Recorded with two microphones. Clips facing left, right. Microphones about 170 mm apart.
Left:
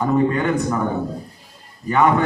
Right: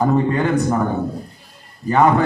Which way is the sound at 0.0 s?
35° right (ahead or behind).